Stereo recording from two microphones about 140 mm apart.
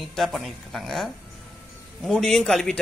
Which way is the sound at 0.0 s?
Centre (ahead or behind).